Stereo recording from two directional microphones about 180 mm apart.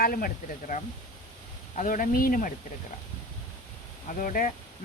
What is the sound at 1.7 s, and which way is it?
Speech, 45° left (ahead or behind).